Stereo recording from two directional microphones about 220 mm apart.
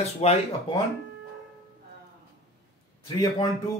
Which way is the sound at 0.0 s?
30° left (ahead or behind).